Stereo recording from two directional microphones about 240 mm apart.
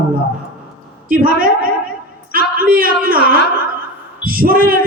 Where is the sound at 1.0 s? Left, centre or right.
Right.